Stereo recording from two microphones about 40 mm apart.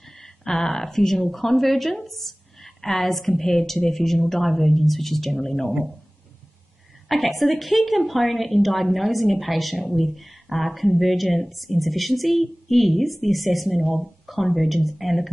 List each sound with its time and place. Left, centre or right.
0.2 s a woman's voice: centre
7.1 s a woman's voice: centre